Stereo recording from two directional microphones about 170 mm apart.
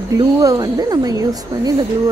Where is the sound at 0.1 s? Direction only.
20° right (ahead or behind).